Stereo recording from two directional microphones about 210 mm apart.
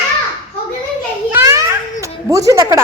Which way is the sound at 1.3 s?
15° right (ahead or behind).